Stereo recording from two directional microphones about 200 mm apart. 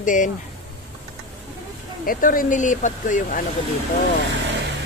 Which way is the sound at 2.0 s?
45° left (ahead or behind).